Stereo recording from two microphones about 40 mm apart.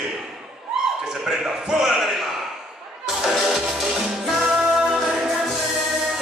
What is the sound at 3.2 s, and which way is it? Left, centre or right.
Music, centre.